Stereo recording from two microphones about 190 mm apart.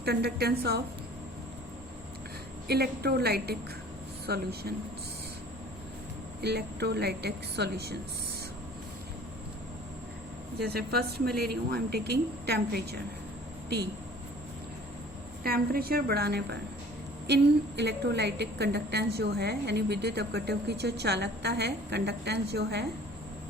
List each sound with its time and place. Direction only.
0.0 s a woman's voice: 60° right (ahead or behind)
2.6 s a woman's voice: 55° right (ahead or behind)
6.4 s a woman's voice: 60° right (ahead or behind)
10.6 s a woman's voice: 55° right (ahead or behind)
15.4 s a woman's voice: 50° right (ahead or behind)